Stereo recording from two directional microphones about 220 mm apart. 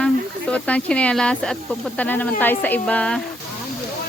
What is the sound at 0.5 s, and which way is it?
Speech, 5° left (ahead or behind).